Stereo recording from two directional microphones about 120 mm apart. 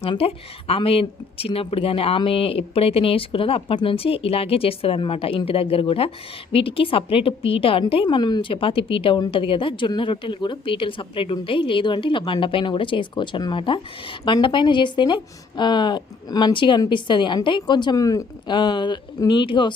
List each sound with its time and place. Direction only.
0.0 s a woman's voice: 55° left (ahead or behind)